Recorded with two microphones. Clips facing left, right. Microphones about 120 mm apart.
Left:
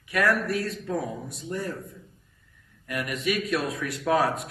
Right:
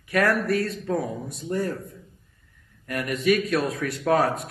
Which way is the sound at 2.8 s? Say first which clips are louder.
Right 5 dB; 40° right (ahead or behind).